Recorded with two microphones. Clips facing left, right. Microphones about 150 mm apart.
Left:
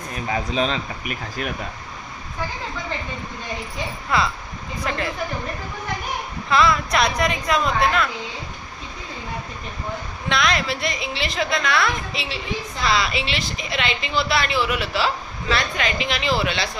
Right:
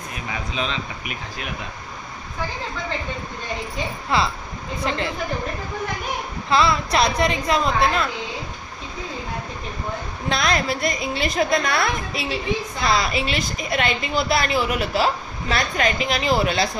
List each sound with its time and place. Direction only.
0.3 s speech: 40° left (ahead or behind)
4.1 s a woman's voice: 30° right (ahead or behind)
6.5 s a woman's voice: 30° right (ahead or behind)
10.2 s a woman's voice: 40° right (ahead or behind)